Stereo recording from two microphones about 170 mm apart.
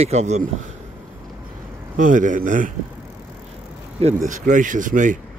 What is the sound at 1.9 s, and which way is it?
Speech, 50° right (ahead or behind).